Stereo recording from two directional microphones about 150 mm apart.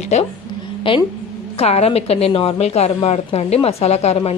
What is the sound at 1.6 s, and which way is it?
A woman's voice, 40° left (ahead or behind).